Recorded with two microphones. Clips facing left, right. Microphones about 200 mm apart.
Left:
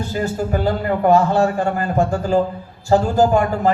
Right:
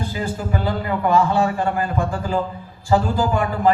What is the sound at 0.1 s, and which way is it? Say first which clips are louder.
A man's voice: left 4 dB; 45° left (ahead or behind).